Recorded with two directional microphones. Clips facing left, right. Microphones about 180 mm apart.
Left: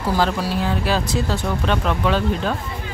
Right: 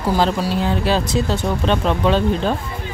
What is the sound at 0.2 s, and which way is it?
Speech, 25° right (ahead or behind).